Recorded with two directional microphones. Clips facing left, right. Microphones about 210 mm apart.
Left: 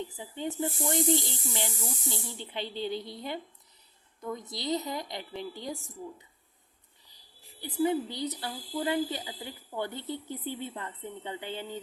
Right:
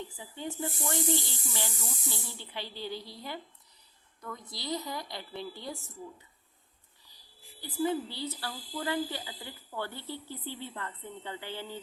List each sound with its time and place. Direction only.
0.0 s speech: 20° left (ahead or behind)
7.1 s speech: 20° left (ahead or behind)